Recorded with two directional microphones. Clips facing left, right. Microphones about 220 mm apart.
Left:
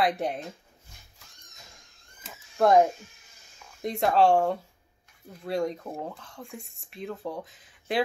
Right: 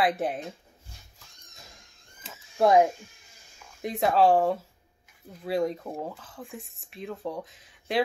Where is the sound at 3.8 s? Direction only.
Centre (ahead or behind).